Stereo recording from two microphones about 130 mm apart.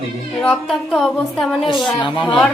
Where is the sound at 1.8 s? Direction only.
40° left (ahead or behind).